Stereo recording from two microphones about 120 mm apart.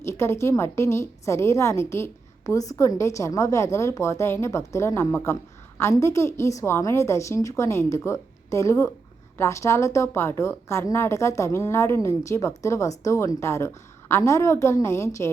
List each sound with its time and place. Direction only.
0.0 s a woman's voice: 20° left (ahead or behind)